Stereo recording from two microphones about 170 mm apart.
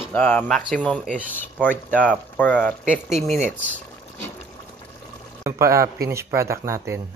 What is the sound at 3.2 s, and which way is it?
Speech, 40° right (ahead or behind).